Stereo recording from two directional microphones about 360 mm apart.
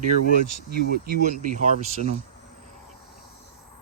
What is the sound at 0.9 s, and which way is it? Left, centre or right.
Speech, right.